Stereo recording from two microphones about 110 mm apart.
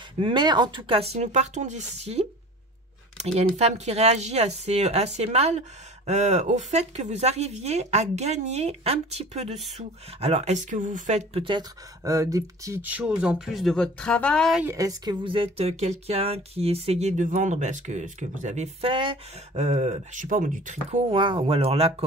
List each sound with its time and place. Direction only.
0.2 s speech: 45° right (ahead or behind); by 11.4 s 90° right
12.0 s speech: 30° right (ahead or behind)
12.8 s speech: 10° right (ahead or behind); by 14.5 s 10° left (ahead or behind)
14.8 s speech: 35° right (ahead or behind)
15.2 s speech: 55° right (ahead or behind); by 18.9 s 90° right
18.9 s speech: 50° right (ahead or behind)
19.5 s speech: 90° right
21.1 s speech: 50° right (ahead or behind)